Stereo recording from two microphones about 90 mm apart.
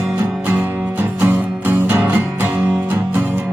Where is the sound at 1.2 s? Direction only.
20° right (ahead or behind).